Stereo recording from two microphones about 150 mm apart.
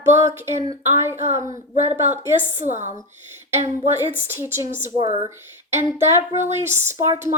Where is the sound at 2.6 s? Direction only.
50° right (ahead or behind).